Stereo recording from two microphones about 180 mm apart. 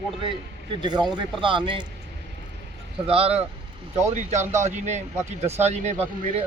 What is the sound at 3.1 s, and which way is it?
Speech, 30° right (ahead or behind).